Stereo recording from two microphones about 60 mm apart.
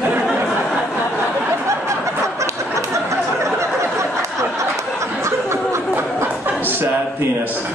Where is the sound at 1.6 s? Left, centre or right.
Right.